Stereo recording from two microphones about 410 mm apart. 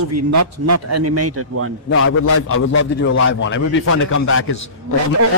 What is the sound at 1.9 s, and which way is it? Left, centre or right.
A man's voice, left.